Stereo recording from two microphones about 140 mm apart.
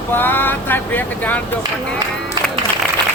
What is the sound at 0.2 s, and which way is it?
Vehicle, 15° left (ahead or behind).